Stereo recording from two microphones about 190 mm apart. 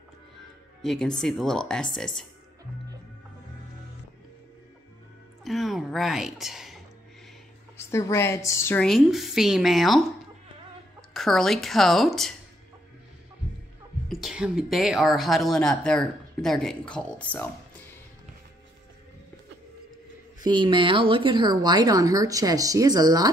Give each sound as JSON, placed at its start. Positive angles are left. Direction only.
{"t": 0.8, "sound": "speech", "side_deg": 0}
{"t": 5.4, "sound": "a woman's voice", "side_deg": 0}
{"t": 7.7, "sound": "a woman's voice", "side_deg": 15}
{"t": 8.8, "sound": "speech", "side_deg": 0}
{"t": 14.0, "sound": "speech", "side_deg": -5}
{"t": 20.4, "sound": "speech", "side_deg": -25}